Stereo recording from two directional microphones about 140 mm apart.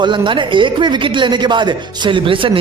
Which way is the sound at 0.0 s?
35° right (ahead or behind).